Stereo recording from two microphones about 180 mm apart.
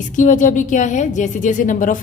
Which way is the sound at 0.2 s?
45° left (ahead or behind).